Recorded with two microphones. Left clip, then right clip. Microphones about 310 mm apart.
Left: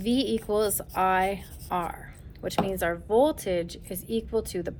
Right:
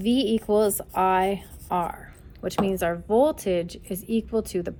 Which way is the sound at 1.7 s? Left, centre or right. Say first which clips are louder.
Right 4 dB; right.